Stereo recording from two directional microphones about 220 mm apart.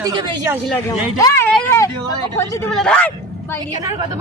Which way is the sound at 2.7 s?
5° left (ahead or behind).